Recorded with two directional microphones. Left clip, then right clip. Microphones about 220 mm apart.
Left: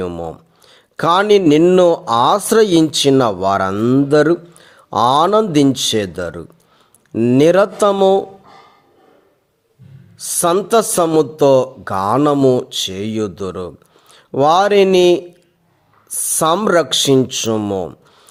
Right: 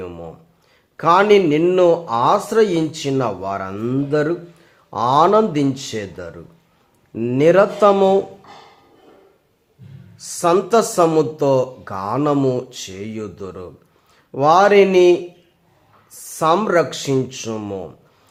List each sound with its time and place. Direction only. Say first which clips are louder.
0.0 s a man's voice: left 8 dB; 40° left (ahead or behind)
10.2 s a man's voice: left 1 dB; 35° left (ahead or behind)